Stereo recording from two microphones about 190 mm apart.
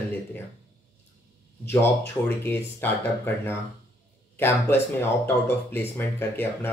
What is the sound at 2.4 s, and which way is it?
Speech, 10° left (ahead or behind).